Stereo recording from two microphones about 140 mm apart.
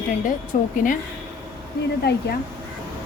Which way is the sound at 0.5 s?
70° left (ahead or behind).